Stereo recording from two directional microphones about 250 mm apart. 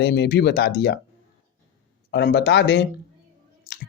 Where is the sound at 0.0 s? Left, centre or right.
Left.